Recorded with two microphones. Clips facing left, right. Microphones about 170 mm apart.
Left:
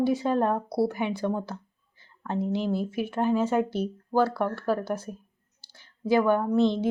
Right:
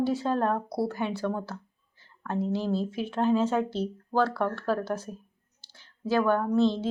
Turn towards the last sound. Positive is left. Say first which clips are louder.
# left 1 dB
turn(degrees=15)  # may be behind; listen again after turning